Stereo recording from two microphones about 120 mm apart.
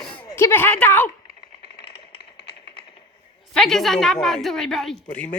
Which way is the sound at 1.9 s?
45° left (ahead or behind).